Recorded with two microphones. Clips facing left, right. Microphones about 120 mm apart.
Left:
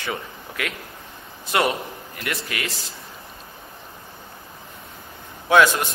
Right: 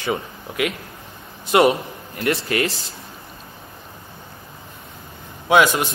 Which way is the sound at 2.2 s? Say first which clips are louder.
Right 9 dB; 35° right (ahead or behind).